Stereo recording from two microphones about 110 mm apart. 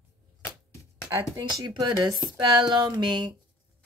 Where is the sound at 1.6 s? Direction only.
40° right (ahead or behind).